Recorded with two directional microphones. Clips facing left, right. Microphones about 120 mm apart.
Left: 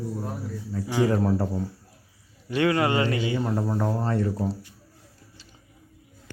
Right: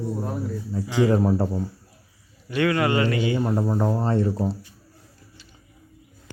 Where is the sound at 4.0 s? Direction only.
30° right (ahead or behind).